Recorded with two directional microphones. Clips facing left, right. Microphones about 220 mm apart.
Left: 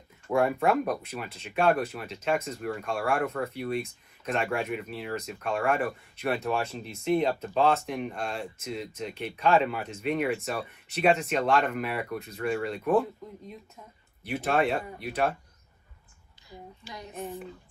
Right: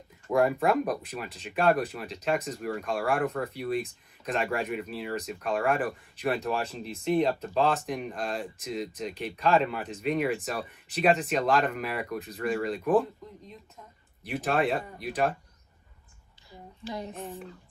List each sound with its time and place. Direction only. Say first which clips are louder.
0.3 s speech: even; centre (ahead or behind)
14.3 s speech: left 1 dB; centre (ahead or behind)
16.8 s speech: right 10 dB; 25° right (ahead or behind)
17.2 s speech: left 2 dB; centre (ahead or behind)